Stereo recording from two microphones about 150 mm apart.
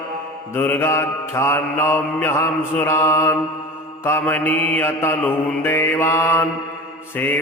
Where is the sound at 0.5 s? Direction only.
15° left (ahead or behind).